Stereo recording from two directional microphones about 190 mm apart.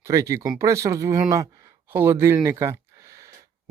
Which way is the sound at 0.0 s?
15° right (ahead or behind).